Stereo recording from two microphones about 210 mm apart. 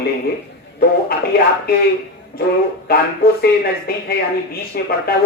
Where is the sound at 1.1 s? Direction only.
45° left (ahead or behind).